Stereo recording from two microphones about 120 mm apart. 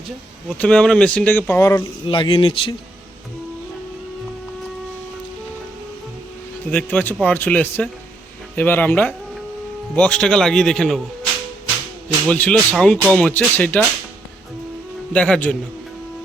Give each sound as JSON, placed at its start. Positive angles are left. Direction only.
{"t": 0.5, "sound": "speech", "side_deg": 10}
{"t": 2.0, "sound": "speech", "side_deg": 45}
{"t": 6.7, "sound": "a man's voice", "side_deg": 15}
{"t": 12.0, "sound": "a man's voice", "side_deg": 10}
{"t": 15.1, "sound": "speech", "side_deg": 10}